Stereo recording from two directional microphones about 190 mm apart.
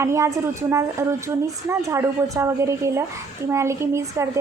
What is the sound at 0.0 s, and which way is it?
A woman's voice, 15° right (ahead or behind).